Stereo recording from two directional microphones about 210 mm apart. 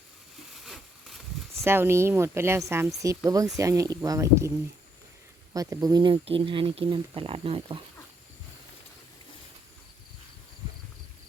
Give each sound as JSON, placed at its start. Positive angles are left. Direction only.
{"t": 1.6, "sound": "speech", "side_deg": -10}
{"t": 5.5, "sound": "speech", "side_deg": -15}